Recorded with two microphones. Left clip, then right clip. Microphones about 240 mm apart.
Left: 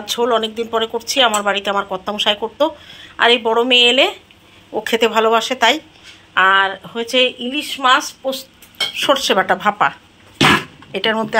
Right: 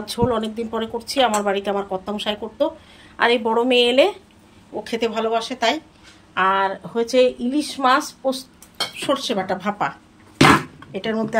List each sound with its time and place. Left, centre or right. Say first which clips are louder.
0.0 s speech: left 5 dB; centre
8.9 s speech: left 8 dB; centre